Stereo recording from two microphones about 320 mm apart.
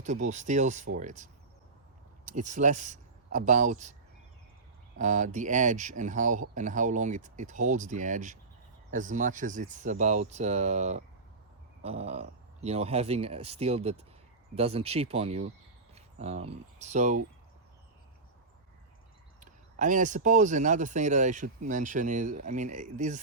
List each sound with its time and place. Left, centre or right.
0.0 s speech: right
4.9 s speech: right
19.4 s speech: right